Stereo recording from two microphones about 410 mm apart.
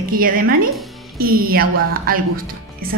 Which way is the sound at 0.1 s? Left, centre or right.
Right.